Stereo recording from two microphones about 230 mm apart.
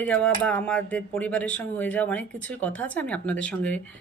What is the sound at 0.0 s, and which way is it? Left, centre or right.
Speech, centre.